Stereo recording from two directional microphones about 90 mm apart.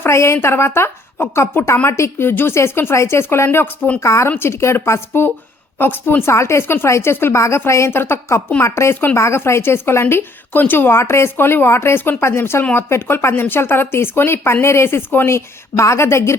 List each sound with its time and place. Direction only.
0.0 s speech: 30° left (ahead or behind)